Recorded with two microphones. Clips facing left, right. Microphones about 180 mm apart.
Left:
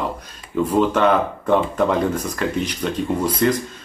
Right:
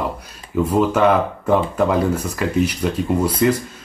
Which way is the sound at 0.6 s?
5° right (ahead or behind).